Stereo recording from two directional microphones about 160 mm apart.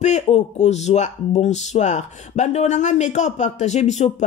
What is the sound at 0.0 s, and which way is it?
Speech, 45° left (ahead or behind).